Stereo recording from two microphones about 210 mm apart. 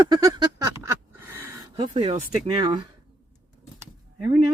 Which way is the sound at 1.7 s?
25° right (ahead or behind).